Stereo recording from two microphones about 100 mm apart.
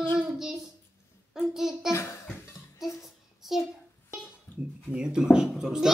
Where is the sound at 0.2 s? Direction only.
5° right (ahead or behind).